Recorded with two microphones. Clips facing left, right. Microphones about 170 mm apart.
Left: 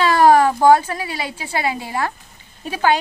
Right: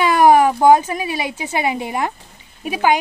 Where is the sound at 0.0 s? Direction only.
15° right (ahead or behind).